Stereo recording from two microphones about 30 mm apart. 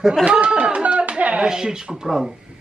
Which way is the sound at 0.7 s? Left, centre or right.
Right.